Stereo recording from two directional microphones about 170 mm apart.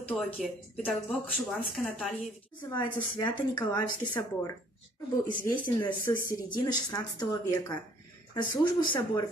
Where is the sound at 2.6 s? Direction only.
25° left (ahead or behind).